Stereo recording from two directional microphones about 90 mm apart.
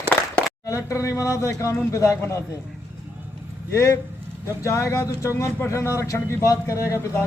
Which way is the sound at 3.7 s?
35° left (ahead or behind).